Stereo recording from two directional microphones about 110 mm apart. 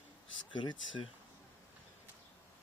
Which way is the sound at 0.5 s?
45° left (ahead or behind).